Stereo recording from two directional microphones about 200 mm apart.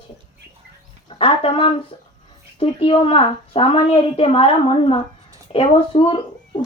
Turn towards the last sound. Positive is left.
turn(degrees=25)  # may be behind; listen again after turning